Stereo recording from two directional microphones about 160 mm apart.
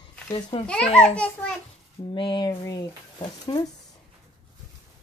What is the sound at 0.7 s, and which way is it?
Speech, 5° left (ahead or behind).